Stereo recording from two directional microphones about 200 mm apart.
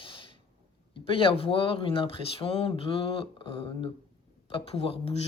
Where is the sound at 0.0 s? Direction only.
25° left (ahead or behind).